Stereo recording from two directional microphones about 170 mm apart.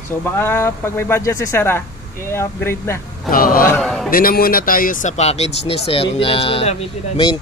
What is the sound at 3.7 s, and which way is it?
Speech, 5° left (ahead or behind).